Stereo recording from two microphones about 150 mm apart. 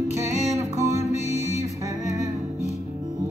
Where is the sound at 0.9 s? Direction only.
50° left (ahead or behind).